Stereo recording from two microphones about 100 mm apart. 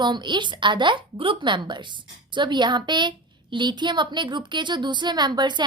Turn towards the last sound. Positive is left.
turn(degrees=-45)  # may be behind; listen again after turning